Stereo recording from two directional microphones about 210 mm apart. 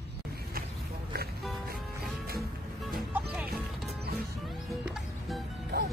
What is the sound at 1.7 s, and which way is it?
Music, 45° right (ahead or behind).